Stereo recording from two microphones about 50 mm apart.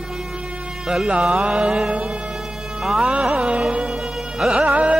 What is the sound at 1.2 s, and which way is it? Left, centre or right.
Speech, centre.